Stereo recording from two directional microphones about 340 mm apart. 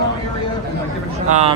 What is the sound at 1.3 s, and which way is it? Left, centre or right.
Speech, centre.